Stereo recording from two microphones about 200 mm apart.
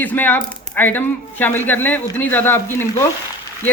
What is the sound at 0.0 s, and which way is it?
Speech, 10° left (ahead or behind).